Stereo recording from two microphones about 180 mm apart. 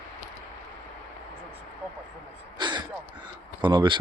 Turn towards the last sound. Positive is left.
turn(degrees=-25)  # may be behind; listen again after turning